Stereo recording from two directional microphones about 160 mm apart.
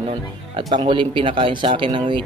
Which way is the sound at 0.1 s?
30° right (ahead or behind).